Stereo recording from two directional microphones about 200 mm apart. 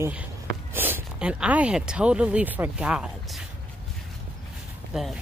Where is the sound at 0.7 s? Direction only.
10° right (ahead or behind).